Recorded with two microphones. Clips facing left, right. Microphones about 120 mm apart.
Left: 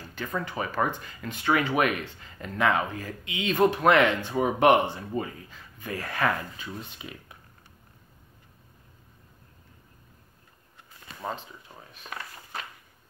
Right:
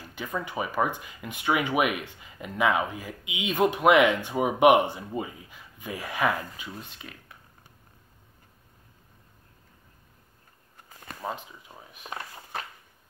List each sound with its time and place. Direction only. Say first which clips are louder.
0.0 s speech: left 1 dB; 10° right (ahead or behind)
6.7 s speech: left 2 dB; centre (ahead or behind)
11.1 s speech: even; 5° right (ahead or behind)
11.7 s a sound: right 1 dB; 20° right (ahead or behind)